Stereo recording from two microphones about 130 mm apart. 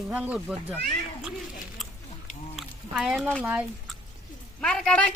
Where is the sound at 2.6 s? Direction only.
Centre (ahead or behind).